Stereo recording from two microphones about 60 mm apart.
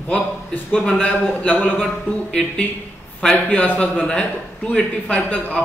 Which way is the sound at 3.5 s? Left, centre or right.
Left.